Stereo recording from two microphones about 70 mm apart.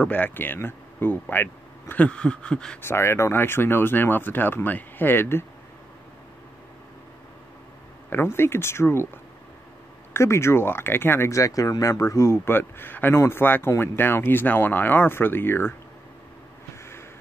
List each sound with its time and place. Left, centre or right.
0.0 s speech: left
2.0 s a sound: centre
2.8 s speech: left
8.1 s speech: left
10.1 s speech: left
12.4 s speech: left